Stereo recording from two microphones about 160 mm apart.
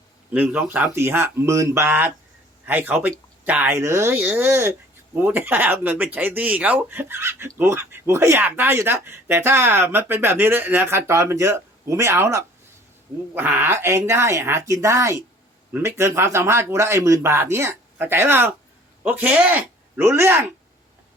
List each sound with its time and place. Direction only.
0.3 s speech: 10° right (ahead or behind)